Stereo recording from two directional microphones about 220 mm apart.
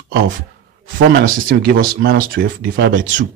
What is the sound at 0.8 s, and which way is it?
Speech, 40° right (ahead or behind).